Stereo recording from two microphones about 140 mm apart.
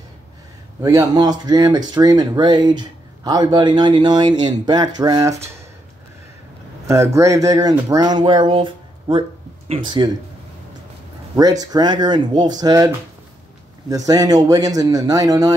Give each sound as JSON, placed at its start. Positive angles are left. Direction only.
{"t": 0.8, "sound": "speech", "side_deg": -25}
{"t": 6.9, "sound": "a man's voice", "side_deg": -20}
{"t": 11.6, "sound": "a man's voice", "side_deg": -30}